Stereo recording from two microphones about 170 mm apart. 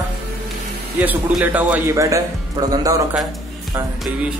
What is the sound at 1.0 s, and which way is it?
Speech, 10° right (ahead or behind).